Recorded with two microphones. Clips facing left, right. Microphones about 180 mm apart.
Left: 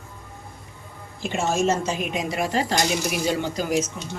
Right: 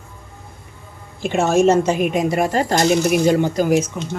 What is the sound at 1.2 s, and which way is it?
Speech, 60° right (ahead or behind).